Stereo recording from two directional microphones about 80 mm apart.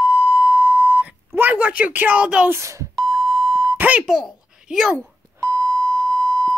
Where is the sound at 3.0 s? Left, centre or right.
Centre.